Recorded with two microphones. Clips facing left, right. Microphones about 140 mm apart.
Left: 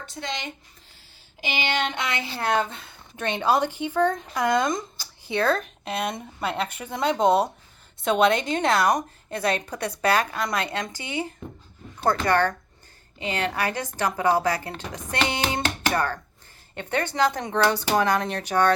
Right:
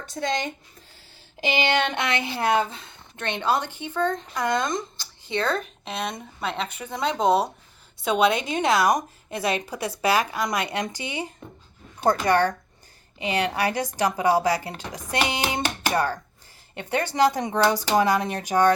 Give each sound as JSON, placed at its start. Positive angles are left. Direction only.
{"t": 0.0, "sound": "speech", "side_deg": -40}
{"t": 2.0, "sound": "speech", "side_deg": -25}
{"t": 2.3, "sound": "a woman's voice", "side_deg": -10}